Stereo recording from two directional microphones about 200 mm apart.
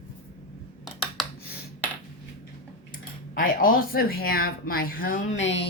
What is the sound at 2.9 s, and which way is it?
Speech, 45° left (ahead or behind).